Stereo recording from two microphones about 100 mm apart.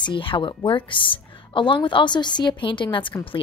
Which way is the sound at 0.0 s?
55° left (ahead or behind).